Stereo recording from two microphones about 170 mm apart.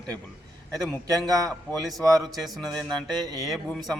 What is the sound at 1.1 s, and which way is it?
Speech, 20° right (ahead or behind).